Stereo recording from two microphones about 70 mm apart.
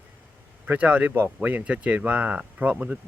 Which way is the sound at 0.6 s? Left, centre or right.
Right.